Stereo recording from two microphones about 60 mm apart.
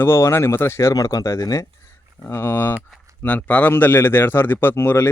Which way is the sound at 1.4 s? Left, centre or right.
Left.